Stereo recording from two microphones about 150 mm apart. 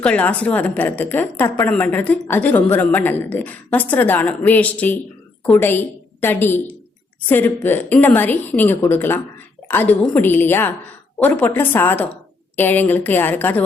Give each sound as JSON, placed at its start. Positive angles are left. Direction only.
{"t": 0.0, "sound": "a woman's voice", "side_deg": 10}